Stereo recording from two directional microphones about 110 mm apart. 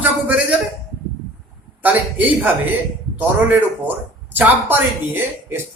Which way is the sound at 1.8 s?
15° right (ahead or behind).